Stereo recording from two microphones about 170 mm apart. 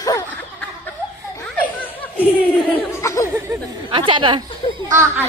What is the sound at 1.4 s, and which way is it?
Laughter, 5° left (ahead or behind).